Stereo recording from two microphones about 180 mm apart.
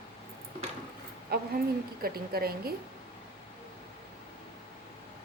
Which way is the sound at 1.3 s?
60° right (ahead or behind).